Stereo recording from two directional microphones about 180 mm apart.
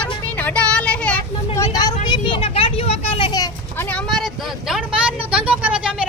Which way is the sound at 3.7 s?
10° left (ahead or behind).